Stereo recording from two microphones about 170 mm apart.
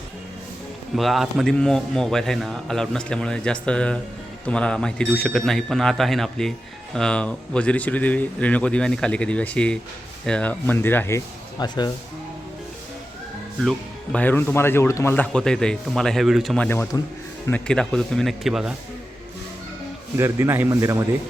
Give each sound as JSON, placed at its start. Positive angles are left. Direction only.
{"t": 0.9, "sound": "speech", "side_deg": 0}
{"t": 11.6, "sound": "speech", "side_deg": 25}
{"t": 13.7, "sound": "speech", "side_deg": 5}
{"t": 16.6, "sound": "speech", "side_deg": 15}
{"t": 20.1, "sound": "speech", "side_deg": -15}